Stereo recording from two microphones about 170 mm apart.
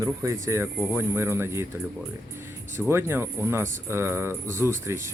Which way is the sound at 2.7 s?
15° right (ahead or behind).